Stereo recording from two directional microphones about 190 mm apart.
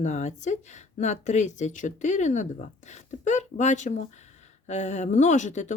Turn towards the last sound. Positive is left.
turn(degrees=40)  # may be behind; listen again after turning